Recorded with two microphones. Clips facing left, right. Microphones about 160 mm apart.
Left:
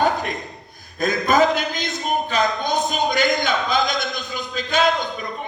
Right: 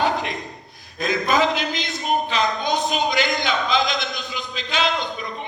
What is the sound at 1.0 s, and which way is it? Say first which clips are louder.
Speech: left 3 dB; 45° left (ahead or behind).